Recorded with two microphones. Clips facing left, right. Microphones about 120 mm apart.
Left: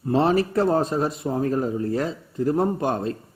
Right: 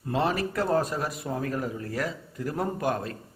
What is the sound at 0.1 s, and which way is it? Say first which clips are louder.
Speech: left 7 dB; 30° left (ahead or behind).